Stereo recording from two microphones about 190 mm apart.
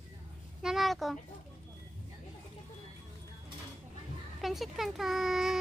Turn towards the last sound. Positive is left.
turn(degrees=0)  # may be behind; listen again after turning